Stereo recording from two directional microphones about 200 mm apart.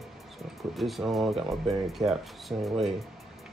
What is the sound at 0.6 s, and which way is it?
Speech, centre (ahead or behind).